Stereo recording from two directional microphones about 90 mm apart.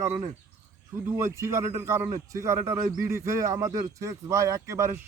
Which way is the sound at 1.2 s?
30° right (ahead or behind).